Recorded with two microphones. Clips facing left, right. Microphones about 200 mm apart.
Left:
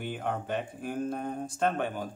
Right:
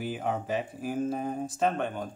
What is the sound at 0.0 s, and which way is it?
Speech, centre (ahead or behind).